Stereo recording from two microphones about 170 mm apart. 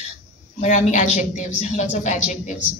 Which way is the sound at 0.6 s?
45° left (ahead or behind).